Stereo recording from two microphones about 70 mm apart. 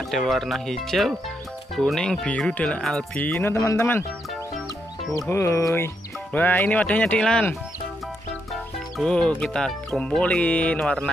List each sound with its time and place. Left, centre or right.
0.1 s speech: centre
2.8 s speech: centre
3.2 s speech: left
3.5 s speech: left
5.3 s speech: left
6.3 s speech: left
7.2 s speech: centre
8.9 s speech: centre